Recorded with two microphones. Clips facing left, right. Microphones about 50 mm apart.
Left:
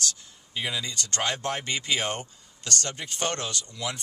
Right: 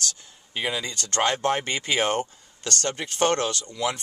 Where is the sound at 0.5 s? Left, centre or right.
Right.